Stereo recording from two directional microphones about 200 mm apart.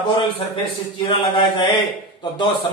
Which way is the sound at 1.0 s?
25° left (ahead or behind).